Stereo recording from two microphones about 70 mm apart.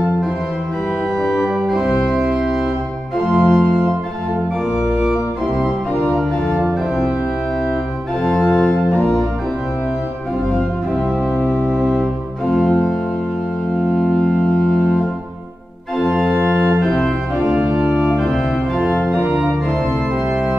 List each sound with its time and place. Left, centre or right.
2.0 s organ: centre
3.3 s organ: centre
8.2 s music: centre
8.6 s organ: left
11.3 s music: centre
13.9 s organ: centre
16.0 s organ: centre